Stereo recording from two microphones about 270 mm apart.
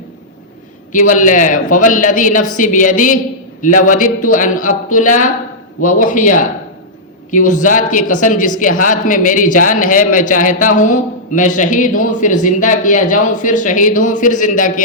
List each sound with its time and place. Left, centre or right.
0.9 s a man's voice: left